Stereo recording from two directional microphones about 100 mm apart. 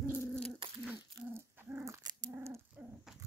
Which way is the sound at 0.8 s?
20° right (ahead or behind).